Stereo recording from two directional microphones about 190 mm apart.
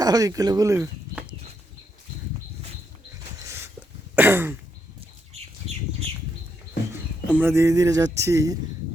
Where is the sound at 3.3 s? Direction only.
10° right (ahead or behind).